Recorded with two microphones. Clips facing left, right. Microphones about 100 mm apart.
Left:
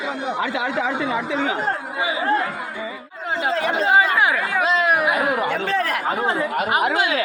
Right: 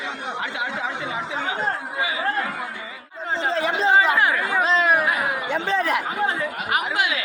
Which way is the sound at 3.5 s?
30° right (ahead or behind).